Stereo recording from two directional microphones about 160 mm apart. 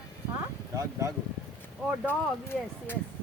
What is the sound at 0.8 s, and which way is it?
Speech, 20° right (ahead or behind).